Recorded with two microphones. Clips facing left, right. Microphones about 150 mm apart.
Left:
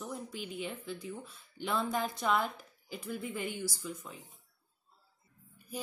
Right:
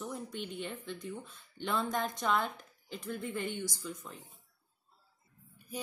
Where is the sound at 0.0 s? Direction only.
5° left (ahead or behind).